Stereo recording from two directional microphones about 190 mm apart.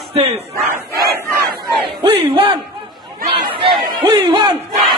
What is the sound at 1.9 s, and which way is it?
Battle cry, 30° right (ahead or behind).